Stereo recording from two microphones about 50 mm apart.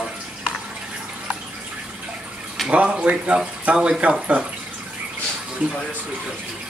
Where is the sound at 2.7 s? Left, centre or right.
Right.